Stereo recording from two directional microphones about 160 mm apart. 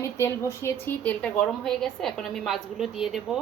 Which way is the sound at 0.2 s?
15° left (ahead or behind).